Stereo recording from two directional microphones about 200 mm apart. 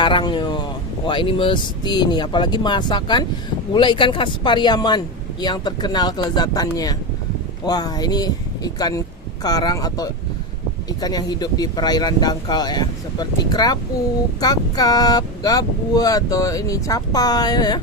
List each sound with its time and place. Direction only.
0.0 s speech: 25° left (ahead or behind)